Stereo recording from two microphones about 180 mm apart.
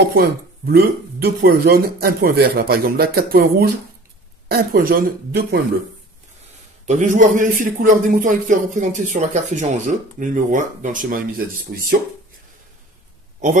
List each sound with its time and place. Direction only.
0.1 s speech: 60° right (ahead or behind)
6.9 s speech: 45° right (ahead or behind)